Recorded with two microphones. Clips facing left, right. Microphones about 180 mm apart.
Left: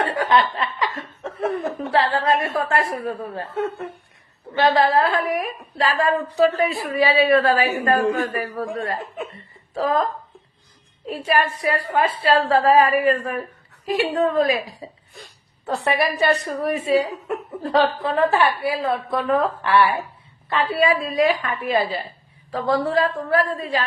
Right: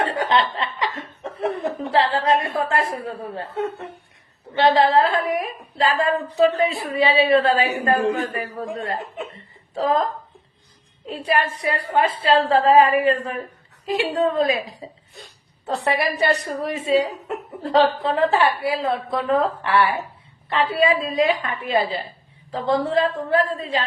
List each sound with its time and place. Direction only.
0.0 s laughter: 25° right (ahead or behind)
3.3 s a woman's voice: 20° right (ahead or behind)
11.3 s a woman's voice: 20° right (ahead or behind)
15.7 s a woman's voice: 20° right (ahead or behind)